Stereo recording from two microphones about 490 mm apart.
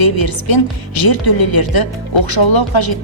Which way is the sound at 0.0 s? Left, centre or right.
Left.